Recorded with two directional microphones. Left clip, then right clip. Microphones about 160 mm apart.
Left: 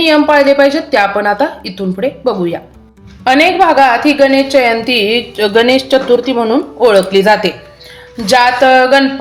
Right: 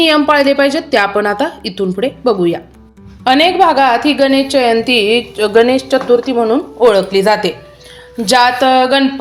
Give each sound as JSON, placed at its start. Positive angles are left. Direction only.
{"t": 0.0, "sound": "a woman's voice", "side_deg": -50}
{"t": 8.2, "sound": "a woman's voice", "side_deg": -40}